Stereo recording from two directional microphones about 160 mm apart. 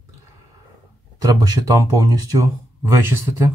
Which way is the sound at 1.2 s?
25° right (ahead or behind).